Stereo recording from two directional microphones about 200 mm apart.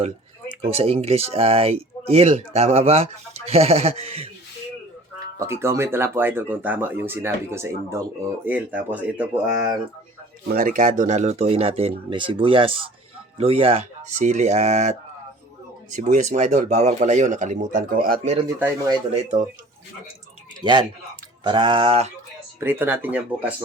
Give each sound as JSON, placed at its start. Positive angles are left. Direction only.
{"t": 0.6, "sound": "speech", "side_deg": -30}
{"t": 5.4, "sound": "speech", "side_deg": -15}
{"t": 10.5, "sound": "speech", "side_deg": -45}
{"t": 21.4, "sound": "speech", "side_deg": -25}
{"t": 22.6, "sound": "speech", "side_deg": -10}